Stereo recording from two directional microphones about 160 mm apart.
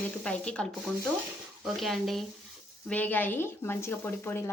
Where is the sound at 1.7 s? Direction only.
Centre (ahead or behind).